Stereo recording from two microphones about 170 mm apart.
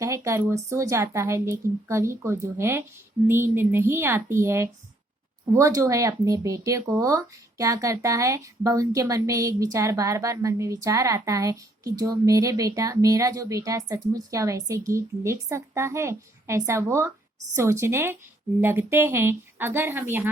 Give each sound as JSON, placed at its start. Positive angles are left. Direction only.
{"t": 0.0, "sound": "speech", "side_deg": -15}